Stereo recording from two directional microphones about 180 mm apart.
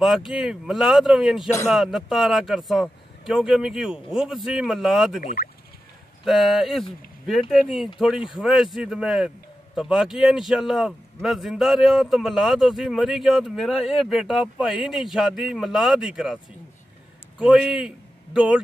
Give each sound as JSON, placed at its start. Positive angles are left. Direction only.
{"t": 0.0, "sound": "a man's voice", "side_deg": 0}
{"t": 5.2, "sound": "speech", "side_deg": 50}
{"t": 6.2, "sound": "a man's voice", "side_deg": 0}
{"t": 17.4, "sound": "a man's voice", "side_deg": -5}